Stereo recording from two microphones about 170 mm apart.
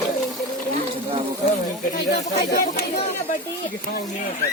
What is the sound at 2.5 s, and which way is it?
Speech, 65° left (ahead or behind).